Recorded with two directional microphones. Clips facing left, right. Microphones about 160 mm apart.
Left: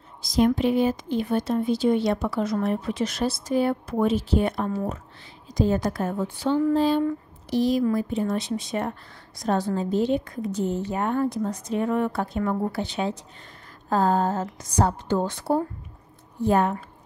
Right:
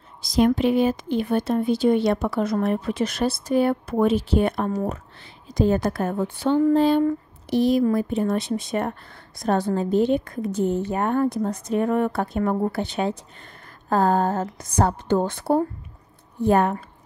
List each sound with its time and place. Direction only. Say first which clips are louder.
0.2 s a woman's voice: right 2 dB; 70° right (ahead or behind)